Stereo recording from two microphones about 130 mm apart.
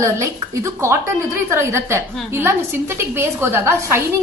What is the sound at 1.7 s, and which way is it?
A woman's voice, 20° right (ahead or behind).